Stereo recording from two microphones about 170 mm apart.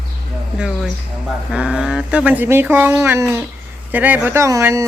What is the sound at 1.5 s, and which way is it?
Speech, 5° right (ahead or behind).